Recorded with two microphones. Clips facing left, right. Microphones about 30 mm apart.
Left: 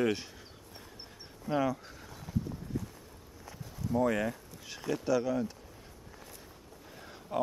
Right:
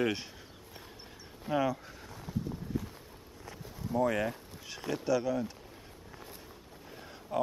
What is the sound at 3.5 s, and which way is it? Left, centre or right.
Walk, centre.